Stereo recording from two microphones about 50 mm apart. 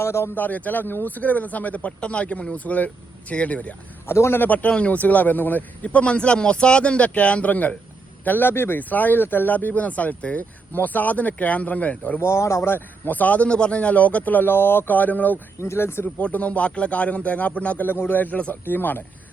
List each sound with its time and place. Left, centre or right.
0.0 s speech: left
0.3 s speech: left
4.0 s speech: left
4.4 s speech: left
8.8 s speech: left
12.2 s speech: left
12.6 s speech: left
15.6 s speech: left
16.1 s speech: left
17.8 s speech: left
18.2 s speech: left
18.6 s speech: left